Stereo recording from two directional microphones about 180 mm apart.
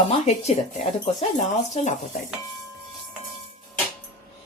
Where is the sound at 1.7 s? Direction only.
40° left (ahead or behind).